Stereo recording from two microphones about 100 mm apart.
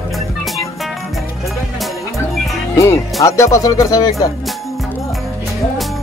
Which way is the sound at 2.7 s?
30° left (ahead or behind).